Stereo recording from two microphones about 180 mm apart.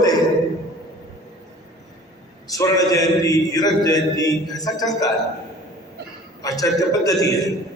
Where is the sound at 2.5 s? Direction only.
20° left (ahead or behind).